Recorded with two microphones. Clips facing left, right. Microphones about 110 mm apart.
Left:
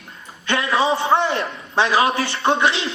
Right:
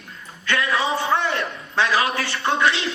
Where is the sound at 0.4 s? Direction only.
30° left (ahead or behind).